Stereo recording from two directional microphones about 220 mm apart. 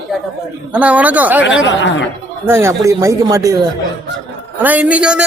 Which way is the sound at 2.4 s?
10° right (ahead or behind).